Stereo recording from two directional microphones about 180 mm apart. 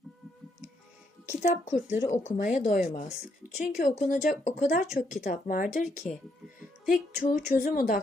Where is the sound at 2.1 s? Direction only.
40° left (ahead or behind).